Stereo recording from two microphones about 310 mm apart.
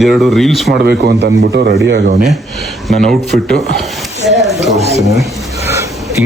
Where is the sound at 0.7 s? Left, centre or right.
Right.